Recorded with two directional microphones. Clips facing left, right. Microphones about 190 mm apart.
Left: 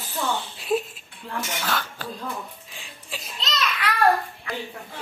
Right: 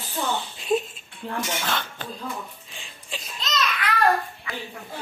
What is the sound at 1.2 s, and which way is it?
Speech, 30° right (ahead or behind).